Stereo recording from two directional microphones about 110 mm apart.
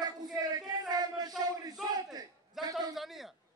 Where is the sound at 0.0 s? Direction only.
35° right (ahead or behind).